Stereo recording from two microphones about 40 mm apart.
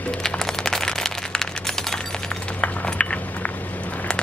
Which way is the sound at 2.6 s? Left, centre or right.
Left.